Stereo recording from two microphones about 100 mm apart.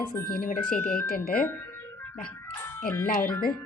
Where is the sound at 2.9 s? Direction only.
20° left (ahead or behind).